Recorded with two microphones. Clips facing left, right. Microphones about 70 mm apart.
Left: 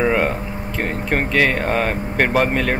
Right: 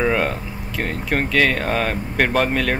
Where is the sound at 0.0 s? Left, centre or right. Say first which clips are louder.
Left 2 dB; centre.